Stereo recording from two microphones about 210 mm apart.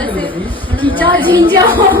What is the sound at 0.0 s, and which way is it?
Chatter, 5° left (ahead or behind).